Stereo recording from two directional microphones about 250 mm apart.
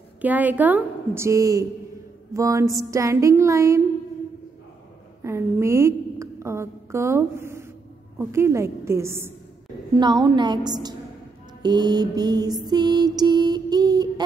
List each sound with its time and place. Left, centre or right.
0.2 s mantra: centre
5.2 s a woman's voice: centre
8.2 s mantra: centre